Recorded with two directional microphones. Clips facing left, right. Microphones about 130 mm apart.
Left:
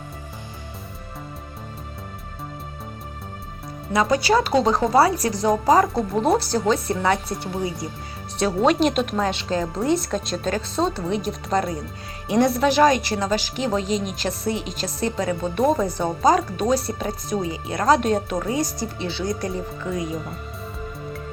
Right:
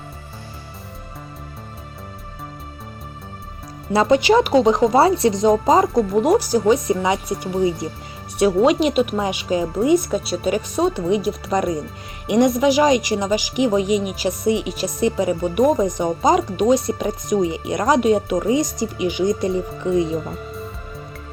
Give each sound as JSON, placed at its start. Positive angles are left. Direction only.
{"t": 3.9, "sound": "speech", "side_deg": -25}